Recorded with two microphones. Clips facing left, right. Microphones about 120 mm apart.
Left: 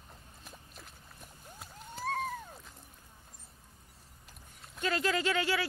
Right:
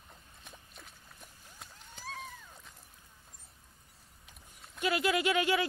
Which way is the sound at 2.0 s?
55° left (ahead or behind).